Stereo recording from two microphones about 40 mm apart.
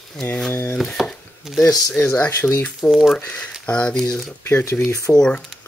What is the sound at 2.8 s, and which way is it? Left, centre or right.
Rub, centre.